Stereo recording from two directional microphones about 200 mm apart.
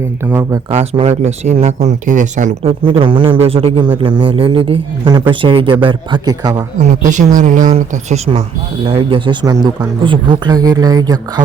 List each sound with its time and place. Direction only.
0.3 s speech: 10° right (ahead or behind)
0.7 s speech: 30° right (ahead or behind)
2.8 s speech: 25° right (ahead or behind)
6.7 s speech: 35° right (ahead or behind)
8.8 s speech: 25° right (ahead or behind)